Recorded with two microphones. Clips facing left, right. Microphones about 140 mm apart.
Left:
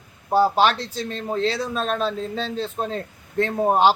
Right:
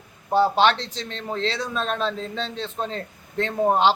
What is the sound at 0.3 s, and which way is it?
A man's voice, 5° left (ahead or behind).